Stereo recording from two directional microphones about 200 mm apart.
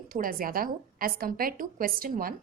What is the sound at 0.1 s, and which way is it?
A woman's voice, 45° right (ahead or behind).